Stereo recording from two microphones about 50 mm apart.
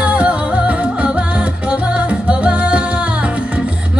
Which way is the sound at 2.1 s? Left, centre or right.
Right.